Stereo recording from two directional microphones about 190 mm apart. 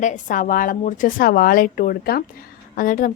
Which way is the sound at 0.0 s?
40° left (ahead or behind).